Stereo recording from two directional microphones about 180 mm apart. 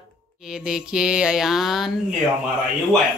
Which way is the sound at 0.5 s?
5° right (ahead or behind).